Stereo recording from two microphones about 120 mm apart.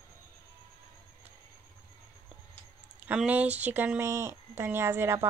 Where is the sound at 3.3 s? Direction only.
15° right (ahead or behind).